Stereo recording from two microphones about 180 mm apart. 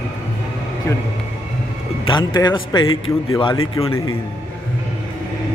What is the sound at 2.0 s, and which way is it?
A man's voice, 25° left (ahead or behind).